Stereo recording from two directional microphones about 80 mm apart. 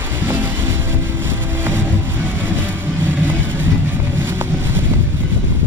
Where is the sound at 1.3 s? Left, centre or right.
Right.